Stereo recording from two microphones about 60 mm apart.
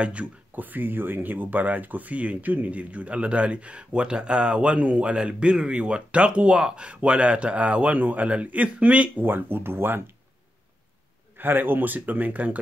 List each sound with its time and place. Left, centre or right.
0.0 s speech: right
9.2 s speech: right
11.3 s speech: right